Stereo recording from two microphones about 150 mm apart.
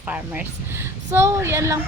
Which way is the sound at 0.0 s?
10° right (ahead or behind).